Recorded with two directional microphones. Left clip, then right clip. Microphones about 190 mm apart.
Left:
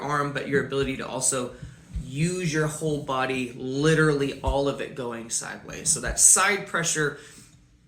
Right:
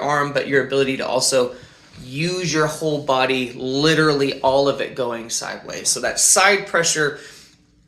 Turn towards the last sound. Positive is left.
turn(degrees=20)  # may be behind; listen again after turning